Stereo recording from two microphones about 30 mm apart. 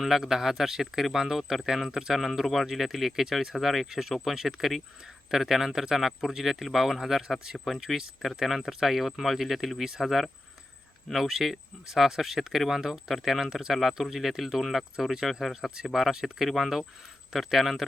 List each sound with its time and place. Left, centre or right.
0.0 s speech: centre
7.9 s speech: centre
9.8 s speech: centre
11.1 s speech: centre
15.7 s speech: centre
16.2 s speech: centre